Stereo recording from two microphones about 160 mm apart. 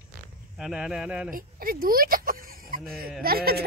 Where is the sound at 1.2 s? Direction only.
65° right (ahead or behind).